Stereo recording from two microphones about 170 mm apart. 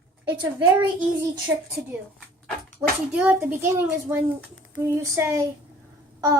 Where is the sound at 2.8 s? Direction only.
5° right (ahead or behind).